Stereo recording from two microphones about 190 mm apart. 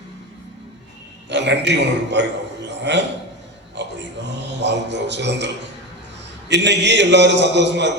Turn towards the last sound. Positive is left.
turn(degrees=-65)  # may be behind; listen again after turning